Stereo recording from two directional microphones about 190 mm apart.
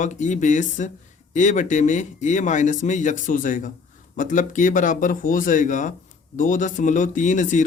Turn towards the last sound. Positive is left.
turn(degrees=40)  # may be behind; listen again after turning